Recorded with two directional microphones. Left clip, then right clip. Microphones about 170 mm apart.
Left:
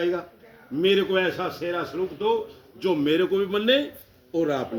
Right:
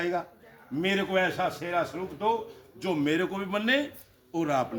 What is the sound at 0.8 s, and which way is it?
Speech, 20° right (ahead or behind).